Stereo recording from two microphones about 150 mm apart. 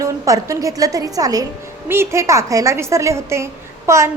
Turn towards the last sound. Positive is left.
turn(degrees=-20)  # may be behind; listen again after turning